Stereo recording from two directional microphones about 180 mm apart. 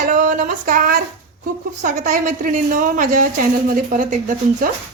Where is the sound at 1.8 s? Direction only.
40° right (ahead or behind).